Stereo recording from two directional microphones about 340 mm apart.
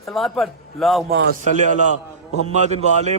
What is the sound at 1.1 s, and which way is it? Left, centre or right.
A man's voice, right.